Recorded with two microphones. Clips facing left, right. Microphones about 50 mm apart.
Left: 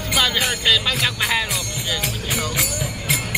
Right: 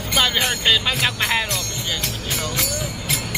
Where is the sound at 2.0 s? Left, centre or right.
Centre.